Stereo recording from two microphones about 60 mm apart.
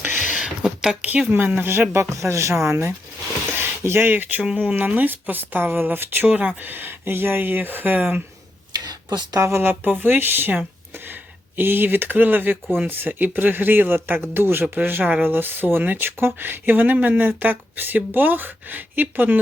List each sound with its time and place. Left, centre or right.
0.0 s a sound: right
0.3 s a sound: centre
1.3 s speech: right
2.0 s speech: right
3.5 s speech: right
6.2 s speech: centre
6.6 s speech: right
8.9 s a sound: right
9.4 s speech: right